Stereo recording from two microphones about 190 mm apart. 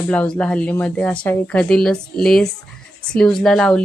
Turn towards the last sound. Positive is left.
turn(degrees=0)  # may be behind; listen again after turning